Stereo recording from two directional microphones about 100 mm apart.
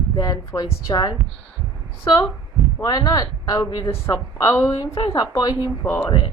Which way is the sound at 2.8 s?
40° left (ahead or behind).